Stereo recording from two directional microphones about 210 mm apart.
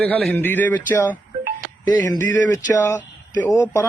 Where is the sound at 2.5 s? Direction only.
15° left (ahead or behind).